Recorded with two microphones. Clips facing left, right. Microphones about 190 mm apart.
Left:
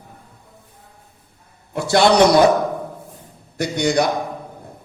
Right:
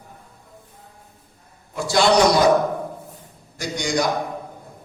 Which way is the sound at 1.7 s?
60° left (ahead or behind).